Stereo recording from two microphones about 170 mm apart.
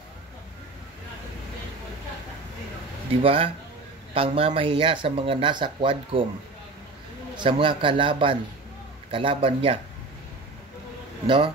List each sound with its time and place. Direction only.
3.2 s speech: 35° right (ahead or behind)
7.3 s a man's voice: 30° right (ahead or behind)
11.2 s a man's voice: 30° right (ahead or behind)